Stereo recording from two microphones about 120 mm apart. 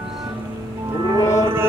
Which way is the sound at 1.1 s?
25° left (ahead or behind).